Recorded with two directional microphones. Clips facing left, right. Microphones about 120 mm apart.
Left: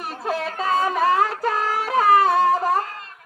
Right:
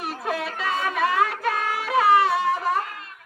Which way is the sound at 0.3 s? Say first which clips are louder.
Left 4 dB; 35° left (ahead or behind).